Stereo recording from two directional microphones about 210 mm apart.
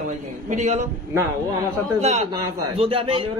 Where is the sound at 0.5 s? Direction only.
35° right (ahead or behind).